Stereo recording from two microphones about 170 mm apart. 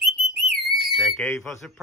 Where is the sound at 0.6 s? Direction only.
Centre (ahead or behind).